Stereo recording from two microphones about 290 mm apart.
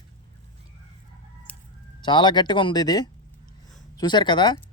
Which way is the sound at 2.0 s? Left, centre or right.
Centre.